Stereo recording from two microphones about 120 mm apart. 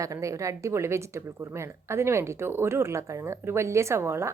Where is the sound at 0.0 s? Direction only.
25° right (ahead or behind).